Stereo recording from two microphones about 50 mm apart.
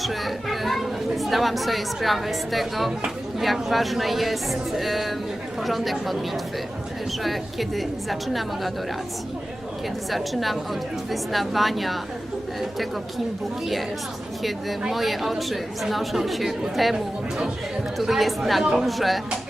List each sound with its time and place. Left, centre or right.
0.0 s a woman's voice: centre
10.1 s a woman's voice: centre
14.4 s a woman's voice: centre
18.6 s speech: centre
18.9 s a woman's voice: centre